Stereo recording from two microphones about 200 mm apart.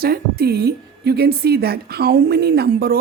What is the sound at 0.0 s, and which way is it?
A woman's voice, 50° right (ahead or behind).